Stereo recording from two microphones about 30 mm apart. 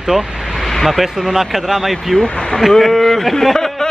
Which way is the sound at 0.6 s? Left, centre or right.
Centre.